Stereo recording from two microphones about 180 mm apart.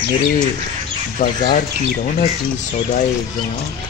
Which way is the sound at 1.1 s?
45° left (ahead or behind).